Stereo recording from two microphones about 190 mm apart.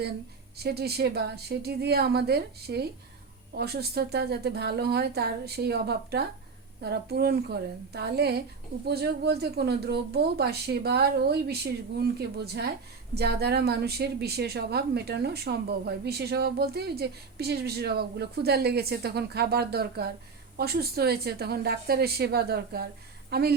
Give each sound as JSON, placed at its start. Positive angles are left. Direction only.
{"t": 0.5, "sound": "a woman's voice", "side_deg": -60}
{"t": 13.1, "sound": "a woman's voice", "side_deg": -60}